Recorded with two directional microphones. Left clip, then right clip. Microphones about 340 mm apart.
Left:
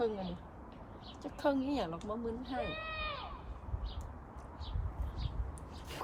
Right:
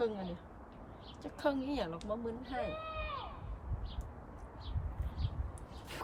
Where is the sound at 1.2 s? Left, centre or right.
Centre.